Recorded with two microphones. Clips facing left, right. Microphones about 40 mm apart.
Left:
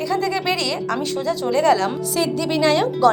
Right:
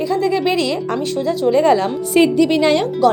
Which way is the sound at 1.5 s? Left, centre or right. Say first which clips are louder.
Right 3 dB; right.